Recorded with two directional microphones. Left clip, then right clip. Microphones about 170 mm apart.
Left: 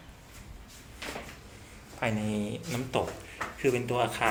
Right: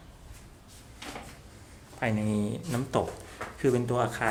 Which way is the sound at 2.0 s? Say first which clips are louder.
Right 1 dB; 50° right (ahead or behind).